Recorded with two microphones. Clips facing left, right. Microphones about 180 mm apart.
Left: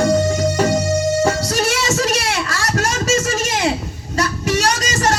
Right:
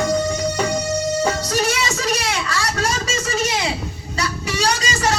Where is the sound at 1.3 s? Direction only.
45° left (ahead or behind).